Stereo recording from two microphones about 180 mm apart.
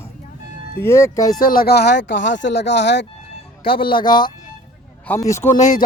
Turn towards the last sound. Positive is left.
turn(degrees=15)  # may be behind; listen again after turning